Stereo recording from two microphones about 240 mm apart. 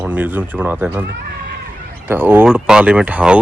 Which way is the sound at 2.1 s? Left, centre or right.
Centre.